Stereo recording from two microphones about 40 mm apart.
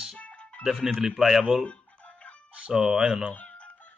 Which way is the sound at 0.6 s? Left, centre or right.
Centre.